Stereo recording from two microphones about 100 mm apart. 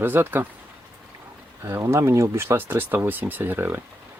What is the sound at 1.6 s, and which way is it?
Speech, 25° right (ahead or behind).